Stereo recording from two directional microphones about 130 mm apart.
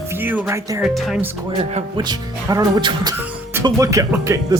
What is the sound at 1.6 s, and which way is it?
Speech, 40° right (ahead or behind).